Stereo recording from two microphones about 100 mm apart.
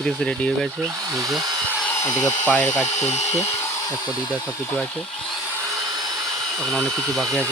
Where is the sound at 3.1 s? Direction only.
90° left.